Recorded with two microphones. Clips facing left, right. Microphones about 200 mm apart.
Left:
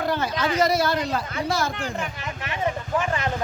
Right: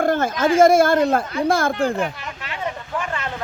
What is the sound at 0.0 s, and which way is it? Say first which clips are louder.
Speech: right 6 dB; 50° right (ahead or behind).